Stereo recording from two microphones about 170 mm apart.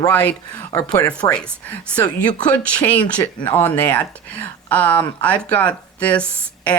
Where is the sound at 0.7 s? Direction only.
20° left (ahead or behind).